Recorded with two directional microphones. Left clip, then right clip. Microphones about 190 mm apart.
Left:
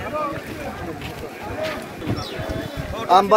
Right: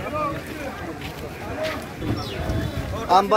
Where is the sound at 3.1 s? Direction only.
55° left (ahead or behind).